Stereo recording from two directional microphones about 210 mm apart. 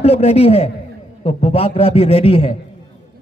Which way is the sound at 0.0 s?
30° left (ahead or behind).